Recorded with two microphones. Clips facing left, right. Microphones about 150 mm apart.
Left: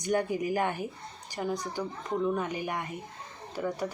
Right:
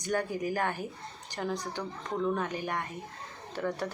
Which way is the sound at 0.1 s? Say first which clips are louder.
Left 3 dB; 15° left (ahead or behind).